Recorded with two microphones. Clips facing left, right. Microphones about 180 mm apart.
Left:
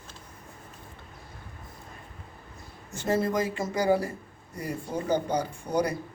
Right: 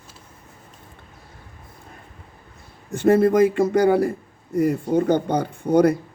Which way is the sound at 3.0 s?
60° right (ahead or behind).